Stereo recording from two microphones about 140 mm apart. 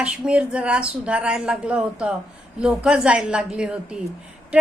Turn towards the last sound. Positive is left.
turn(degrees=-5)  # may be behind; listen again after turning